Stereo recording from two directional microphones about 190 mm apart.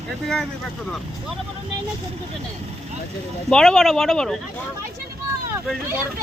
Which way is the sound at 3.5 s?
Centre (ahead or behind).